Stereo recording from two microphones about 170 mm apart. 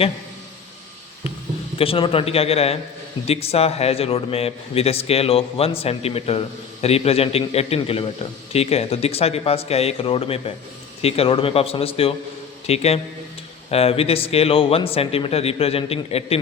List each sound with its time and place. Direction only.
1.8 s a man's voice: 30° left (ahead or behind)